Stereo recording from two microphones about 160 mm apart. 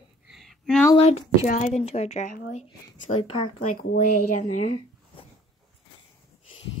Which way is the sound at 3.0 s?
30° left (ahead or behind).